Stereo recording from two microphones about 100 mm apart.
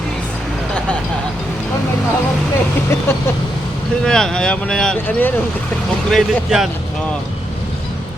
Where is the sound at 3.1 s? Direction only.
25° left (ahead or behind).